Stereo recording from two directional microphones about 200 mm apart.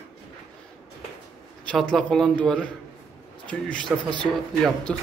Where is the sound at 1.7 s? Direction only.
5° left (ahead or behind).